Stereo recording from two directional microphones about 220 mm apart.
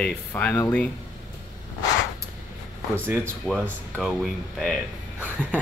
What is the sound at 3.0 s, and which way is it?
Speech, 5° right (ahead or behind).